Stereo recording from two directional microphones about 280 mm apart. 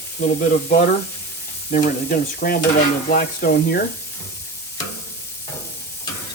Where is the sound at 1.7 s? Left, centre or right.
Left.